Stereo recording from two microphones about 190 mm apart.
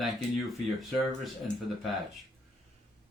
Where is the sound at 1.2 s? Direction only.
Centre (ahead or behind).